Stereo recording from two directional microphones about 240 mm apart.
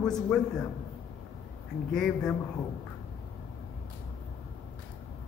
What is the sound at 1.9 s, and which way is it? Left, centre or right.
Speech, centre.